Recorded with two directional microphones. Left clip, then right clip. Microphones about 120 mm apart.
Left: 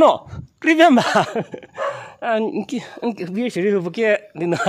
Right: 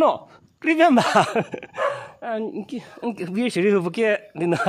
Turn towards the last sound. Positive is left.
turn(degrees=5)  # may be behind; listen again after turning